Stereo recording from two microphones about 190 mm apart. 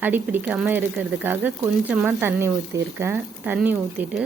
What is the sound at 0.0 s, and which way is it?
Speech, 10° right (ahead or behind).